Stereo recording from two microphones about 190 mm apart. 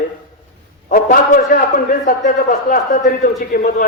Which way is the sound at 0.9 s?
50° left (ahead or behind).